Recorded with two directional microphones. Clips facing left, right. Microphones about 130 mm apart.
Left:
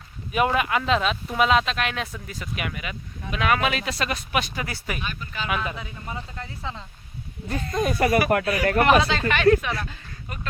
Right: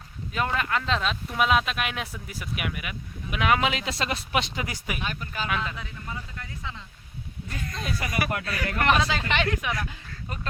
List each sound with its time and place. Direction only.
0.3 s speech: 15° left (ahead or behind); by 2.9 s 5° right (ahead or behind)
3.3 s speech: 15° right (ahead or behind)
5.5 s speech: 10° left (ahead or behind)
5.8 s speech: 25° left (ahead or behind); by 8.5 s 55° left (ahead or behind)
8.8 s speech: 5° left (ahead or behind)
9.2 s speech: 20° right (ahead or behind)